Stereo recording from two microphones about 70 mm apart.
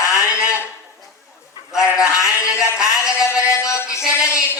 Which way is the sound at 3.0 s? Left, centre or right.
Left.